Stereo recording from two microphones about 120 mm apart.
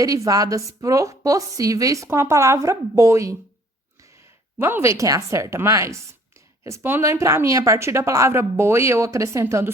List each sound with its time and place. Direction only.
0.0 s a woman's voice: 30° right (ahead or behind)
4.5 s a woman's voice: 20° right (ahead or behind)